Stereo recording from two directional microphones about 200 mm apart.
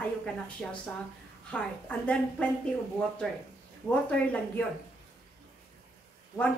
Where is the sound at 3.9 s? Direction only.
5° left (ahead or behind).